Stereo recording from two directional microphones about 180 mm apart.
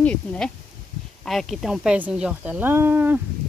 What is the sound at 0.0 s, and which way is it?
Speech, 5° left (ahead or behind).